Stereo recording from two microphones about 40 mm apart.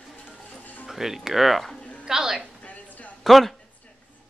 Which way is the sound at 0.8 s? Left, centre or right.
Centre.